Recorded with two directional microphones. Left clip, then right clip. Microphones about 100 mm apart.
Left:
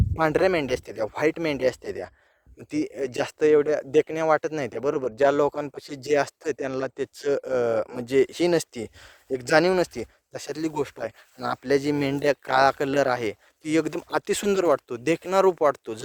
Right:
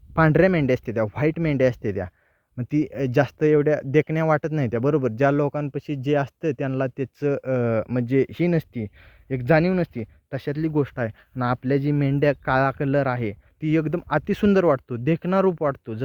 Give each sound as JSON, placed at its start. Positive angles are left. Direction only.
{"t": 0.2, "sound": "speech", "side_deg": 15}
{"t": 12.2, "sound": "speech", "side_deg": 45}
{"t": 14.4, "sound": "speech", "side_deg": 25}